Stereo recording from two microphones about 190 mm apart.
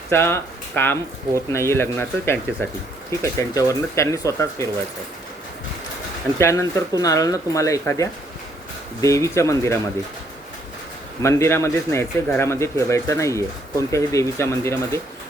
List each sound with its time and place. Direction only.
0.1 s a man's voice: 10° left (ahead or behind)
6.4 s a man's voice: 15° left (ahead or behind)
11.2 s a man's voice: 15° left (ahead or behind)